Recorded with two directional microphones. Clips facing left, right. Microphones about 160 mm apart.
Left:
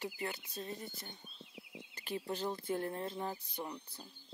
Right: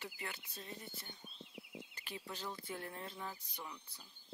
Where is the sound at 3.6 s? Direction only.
40° left (ahead or behind).